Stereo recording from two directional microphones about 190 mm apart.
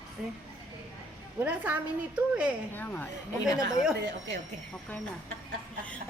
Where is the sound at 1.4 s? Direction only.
10° right (ahead or behind).